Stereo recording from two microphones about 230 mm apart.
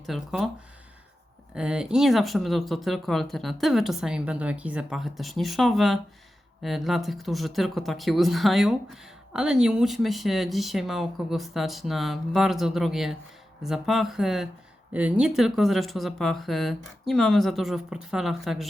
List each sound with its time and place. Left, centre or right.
0.0 s speech: centre
1.5 s speech: centre